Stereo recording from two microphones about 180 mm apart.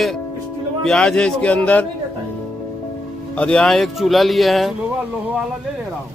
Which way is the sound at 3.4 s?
5° left (ahead or behind).